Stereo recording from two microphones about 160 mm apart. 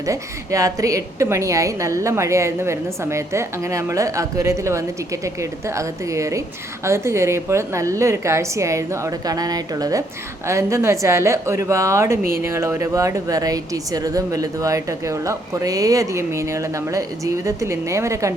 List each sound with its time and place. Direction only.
0.0 s a woman's voice: 20° right (ahead or behind)